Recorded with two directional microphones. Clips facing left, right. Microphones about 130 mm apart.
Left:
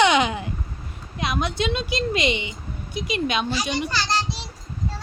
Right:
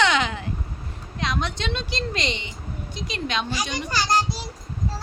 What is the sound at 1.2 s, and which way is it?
Speech, 10° left (ahead or behind).